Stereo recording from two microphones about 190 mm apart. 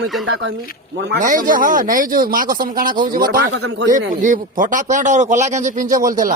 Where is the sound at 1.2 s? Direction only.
45° right (ahead or behind).